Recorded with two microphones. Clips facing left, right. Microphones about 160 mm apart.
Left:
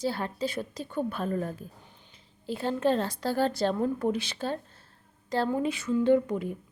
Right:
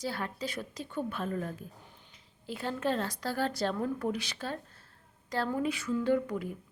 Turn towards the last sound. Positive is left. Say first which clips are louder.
# left 5 dB
turn(degrees=25)  # may be behind; listen again after turning